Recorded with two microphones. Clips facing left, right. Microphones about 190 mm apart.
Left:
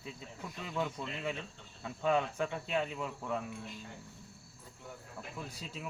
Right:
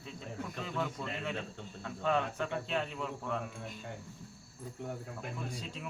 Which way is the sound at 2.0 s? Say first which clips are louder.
Left 1 dB; 5° left (ahead or behind).